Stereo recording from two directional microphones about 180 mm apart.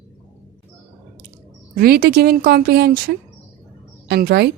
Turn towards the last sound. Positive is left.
turn(degrees=-60)  # may be behind; listen again after turning